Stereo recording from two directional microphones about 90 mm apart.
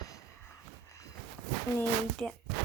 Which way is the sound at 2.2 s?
10° left (ahead or behind).